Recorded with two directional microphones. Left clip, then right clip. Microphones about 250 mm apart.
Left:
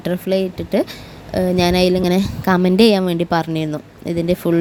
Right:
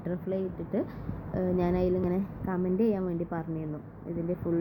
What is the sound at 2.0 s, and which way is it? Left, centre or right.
Speech, left.